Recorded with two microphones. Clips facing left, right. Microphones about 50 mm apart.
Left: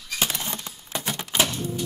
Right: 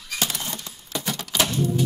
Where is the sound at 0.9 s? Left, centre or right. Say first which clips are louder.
Right 1 dB; left.